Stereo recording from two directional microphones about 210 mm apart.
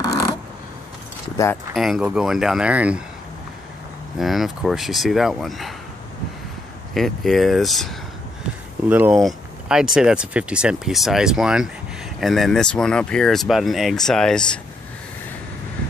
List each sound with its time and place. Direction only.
0.0 s a sound: 15° left (ahead or behind)
1.3 s speech: 15° left (ahead or behind)
1.7 s speech: centre (ahead or behind)
4.2 s speech: centre (ahead or behind)
6.9 s speech: centre (ahead or behind)